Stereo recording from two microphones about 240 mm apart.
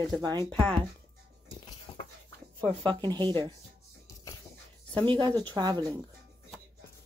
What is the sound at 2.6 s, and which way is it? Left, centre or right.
Speech, right.